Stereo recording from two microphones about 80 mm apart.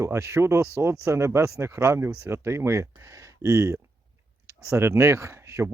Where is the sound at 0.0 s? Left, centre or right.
Right.